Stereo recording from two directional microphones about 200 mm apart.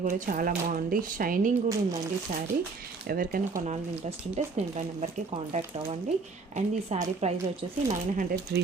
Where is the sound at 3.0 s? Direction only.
45° right (ahead or behind).